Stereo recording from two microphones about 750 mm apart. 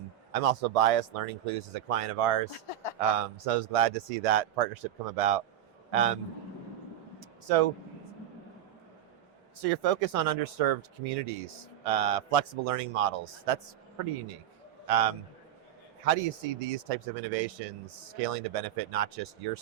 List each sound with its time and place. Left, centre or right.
0.3 s speech: right
2.5 s speech: left
3.2 s speech: right
7.2 s a sound: right
9.6 s a man's voice: right